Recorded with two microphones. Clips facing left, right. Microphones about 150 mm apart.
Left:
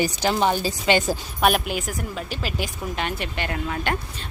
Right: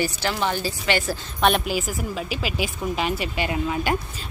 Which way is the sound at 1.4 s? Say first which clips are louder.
Right 1 dB; centre (ahead or behind).